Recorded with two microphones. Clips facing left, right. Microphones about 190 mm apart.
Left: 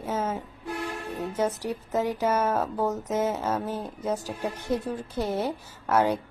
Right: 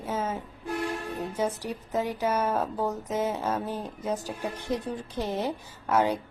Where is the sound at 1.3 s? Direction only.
10° right (ahead or behind).